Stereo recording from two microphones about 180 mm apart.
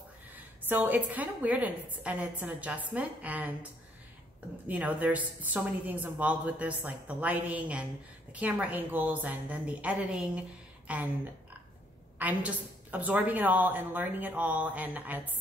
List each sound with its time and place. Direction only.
0.7 s a woman's voice: 10° right (ahead or behind)
4.6 s a woman's voice: 10° right (ahead or behind)
12.2 s a woman's voice: 10° right (ahead or behind)